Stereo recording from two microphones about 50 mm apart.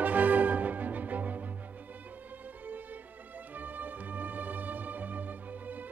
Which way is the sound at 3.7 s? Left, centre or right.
Right.